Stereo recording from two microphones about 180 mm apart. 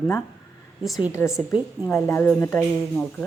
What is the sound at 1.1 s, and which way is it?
A woman's voice, 15° left (ahead or behind).